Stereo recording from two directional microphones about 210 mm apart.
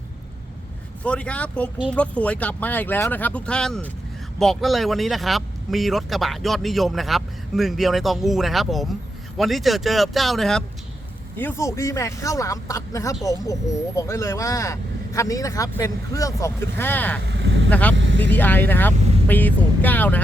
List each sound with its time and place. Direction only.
1.0 s speech: 5° left (ahead or behind)
11.3 s speech: 10° left (ahead or behind)
17.2 s vehicle: 55° right (ahead or behind)
17.7 s speech: 5° left (ahead or behind)
17.9 s vehicle: 60° right (ahead or behind)
18.2 s speech: 10° left (ahead or behind)